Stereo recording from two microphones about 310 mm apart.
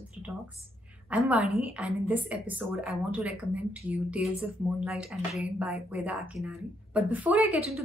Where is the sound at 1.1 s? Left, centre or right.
Centre.